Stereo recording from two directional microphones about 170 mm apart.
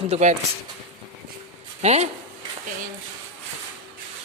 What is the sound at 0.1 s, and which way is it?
Speech, 45° right (ahead or behind).